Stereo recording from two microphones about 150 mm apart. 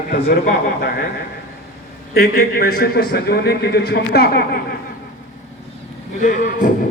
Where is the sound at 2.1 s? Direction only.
90° left.